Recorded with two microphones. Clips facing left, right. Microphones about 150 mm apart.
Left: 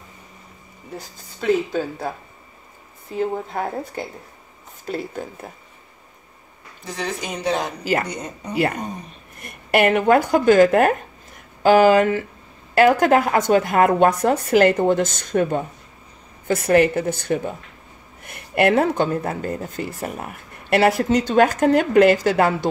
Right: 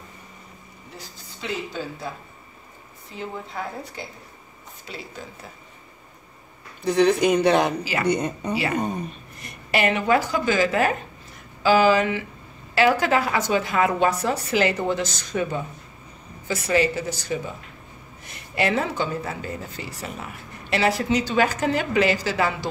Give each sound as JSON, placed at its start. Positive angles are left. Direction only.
{"t": 0.9, "sound": "speech", "side_deg": 50}
{"t": 3.2, "sound": "speech", "side_deg": 50}
{"t": 6.8, "sound": "speech", "side_deg": -65}
{"t": 9.4, "sound": "a woman's voice", "side_deg": 55}